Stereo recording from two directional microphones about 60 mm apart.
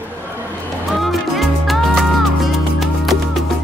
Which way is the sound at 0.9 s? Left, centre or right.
Centre.